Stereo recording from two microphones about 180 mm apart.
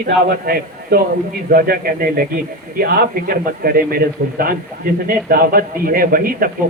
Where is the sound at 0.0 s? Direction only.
60° right (ahead or behind).